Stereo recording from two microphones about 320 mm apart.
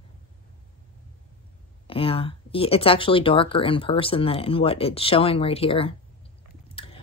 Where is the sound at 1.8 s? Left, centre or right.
Centre.